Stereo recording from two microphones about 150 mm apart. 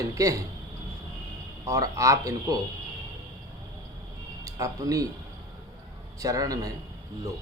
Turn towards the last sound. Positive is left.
turn(degrees=-25)  # may be behind; listen again after turning